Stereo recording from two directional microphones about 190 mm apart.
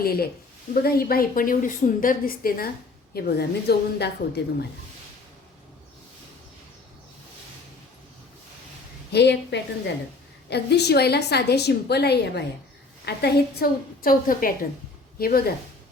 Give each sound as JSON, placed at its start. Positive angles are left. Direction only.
{"t": 0.0, "sound": "a woman's voice", "side_deg": 55}
{"t": 9.1, "sound": "a woman's voice", "side_deg": 65}